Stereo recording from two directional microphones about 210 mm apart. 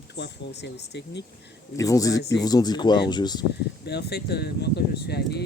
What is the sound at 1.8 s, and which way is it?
Speech, 15° left (ahead or behind).